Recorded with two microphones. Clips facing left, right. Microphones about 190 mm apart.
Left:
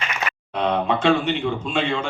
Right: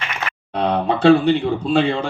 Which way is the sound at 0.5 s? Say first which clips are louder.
Right 2 dB; 35° right (ahead or behind).